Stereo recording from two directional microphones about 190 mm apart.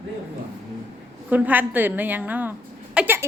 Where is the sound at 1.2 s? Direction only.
10° right (ahead or behind).